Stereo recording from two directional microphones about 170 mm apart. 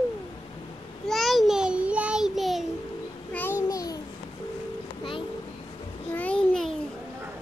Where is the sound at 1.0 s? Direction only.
Centre (ahead or behind).